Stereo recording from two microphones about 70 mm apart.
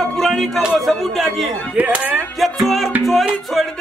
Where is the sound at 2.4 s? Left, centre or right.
Centre.